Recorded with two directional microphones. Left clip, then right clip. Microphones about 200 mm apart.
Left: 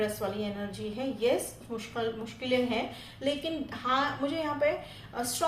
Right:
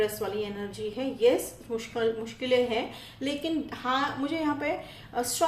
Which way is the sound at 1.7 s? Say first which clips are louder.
Right 5 dB; 30° right (ahead or behind).